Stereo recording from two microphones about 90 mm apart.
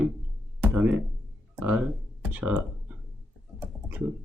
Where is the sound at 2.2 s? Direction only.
15° right (ahead or behind).